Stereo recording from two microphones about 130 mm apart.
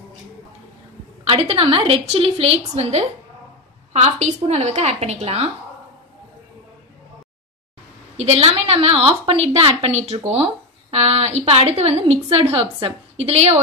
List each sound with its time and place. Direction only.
1.2 s a woman's voice: 45° right (ahead or behind)
8.2 s a woman's voice: 55° right (ahead or behind)